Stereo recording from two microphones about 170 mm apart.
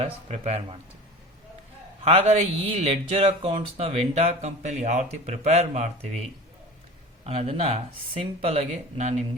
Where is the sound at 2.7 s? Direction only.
35° right (ahead or behind).